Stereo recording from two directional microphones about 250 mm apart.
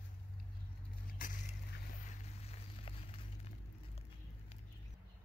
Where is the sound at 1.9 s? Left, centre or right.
Left.